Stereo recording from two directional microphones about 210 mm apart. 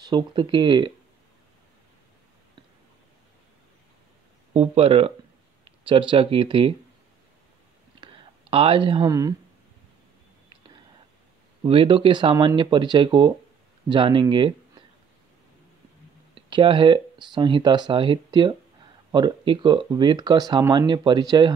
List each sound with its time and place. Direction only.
0.0 s speech: 20° right (ahead or behind)
4.6 s speech: 25° right (ahead or behind)
8.0 s a sound: 25° right (ahead or behind)
11.6 s speech: 25° right (ahead or behind)
16.3 s speech: 25° right (ahead or behind)